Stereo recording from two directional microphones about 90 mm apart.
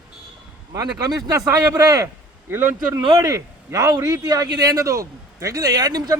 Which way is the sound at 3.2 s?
40° right (ahead or behind).